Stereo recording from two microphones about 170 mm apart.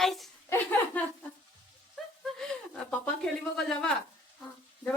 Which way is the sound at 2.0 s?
Centre (ahead or behind).